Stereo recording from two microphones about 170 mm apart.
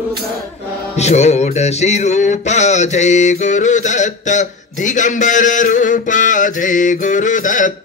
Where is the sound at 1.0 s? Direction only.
40° left (ahead or behind).